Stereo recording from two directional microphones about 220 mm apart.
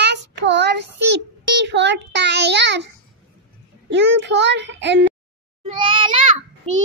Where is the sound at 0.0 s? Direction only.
50° right (ahead or behind).